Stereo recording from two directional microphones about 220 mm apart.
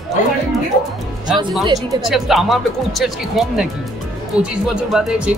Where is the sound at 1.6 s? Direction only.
15° right (ahead or behind).